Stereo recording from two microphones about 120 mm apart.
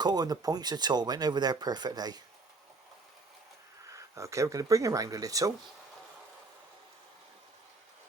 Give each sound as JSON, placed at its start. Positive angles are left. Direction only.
{"t": 0.0, "sound": "speech", "side_deg": -35}
{"t": 3.9, "sound": "speech", "side_deg": -25}